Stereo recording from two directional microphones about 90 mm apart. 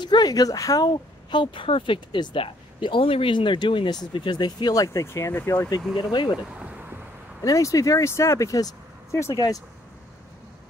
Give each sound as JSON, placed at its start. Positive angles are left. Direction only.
{"t": 0.0, "sound": "speech", "side_deg": 55}
{"t": 1.3, "sound": "speech", "side_deg": 70}
{"t": 2.4, "sound": "speech", "side_deg": 80}
{"t": 5.0, "sound": "speech", "side_deg": 30}
{"t": 5.9, "sound": "speech", "side_deg": 55}
{"t": 6.3, "sound": "a sound", "side_deg": -10}
{"t": 7.4, "sound": "speech", "side_deg": 40}